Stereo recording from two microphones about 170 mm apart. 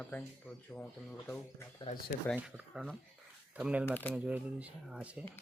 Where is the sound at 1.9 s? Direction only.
45° left (ahead or behind).